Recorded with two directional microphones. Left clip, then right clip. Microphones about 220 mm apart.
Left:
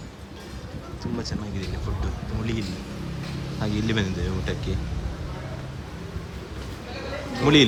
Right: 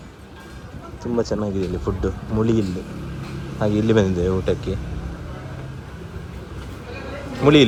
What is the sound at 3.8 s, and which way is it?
Speech, 5° left (ahead or behind).